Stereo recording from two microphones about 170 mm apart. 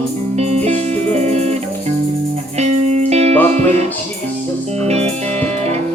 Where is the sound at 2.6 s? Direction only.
40° right (ahead or behind).